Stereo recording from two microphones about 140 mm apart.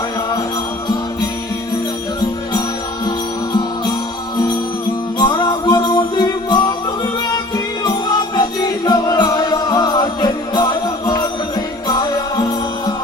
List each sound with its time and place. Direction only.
5.2 s music: 35° left (ahead or behind)
8.4 s music: 30° left (ahead or behind)